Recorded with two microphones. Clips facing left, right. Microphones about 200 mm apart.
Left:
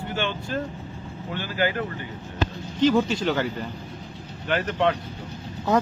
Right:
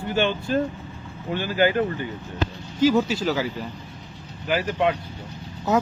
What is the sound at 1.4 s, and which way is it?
Speech, 20° right (ahead or behind).